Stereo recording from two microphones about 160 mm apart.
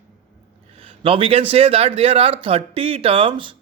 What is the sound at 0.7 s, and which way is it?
Speech, 35° right (ahead or behind).